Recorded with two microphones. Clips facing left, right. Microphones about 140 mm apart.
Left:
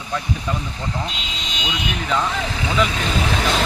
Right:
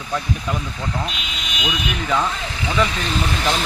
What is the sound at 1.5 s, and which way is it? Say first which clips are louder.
Vehicle: right 2 dB; 25° left (ahead or behind).